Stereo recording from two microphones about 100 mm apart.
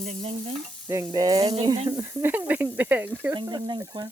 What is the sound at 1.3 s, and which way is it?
Speech, 85° right.